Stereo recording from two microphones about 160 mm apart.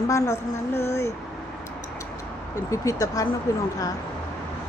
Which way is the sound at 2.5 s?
20° left (ahead or behind).